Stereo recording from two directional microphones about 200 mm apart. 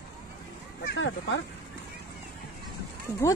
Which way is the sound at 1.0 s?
65° left (ahead or behind).